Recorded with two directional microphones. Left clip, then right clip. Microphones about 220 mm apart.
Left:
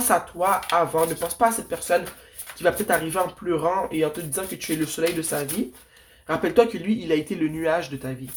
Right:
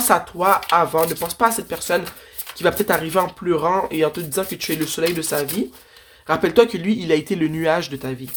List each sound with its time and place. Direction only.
0.1 s speech: 40° right (ahead or behind)